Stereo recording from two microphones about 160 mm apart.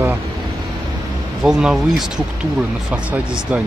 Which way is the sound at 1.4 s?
5° right (ahead or behind).